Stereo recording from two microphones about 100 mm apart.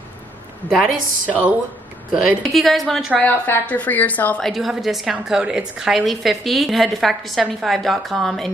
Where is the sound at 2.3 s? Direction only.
Centre (ahead or behind).